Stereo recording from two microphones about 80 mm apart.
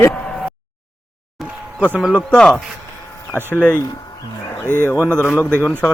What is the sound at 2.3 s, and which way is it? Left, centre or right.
Speech, centre.